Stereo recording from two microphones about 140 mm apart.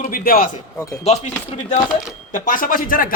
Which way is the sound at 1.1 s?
55° left (ahead or behind).